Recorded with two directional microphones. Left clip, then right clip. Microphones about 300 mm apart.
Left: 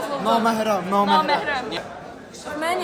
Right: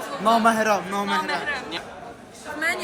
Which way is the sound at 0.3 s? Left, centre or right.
Right.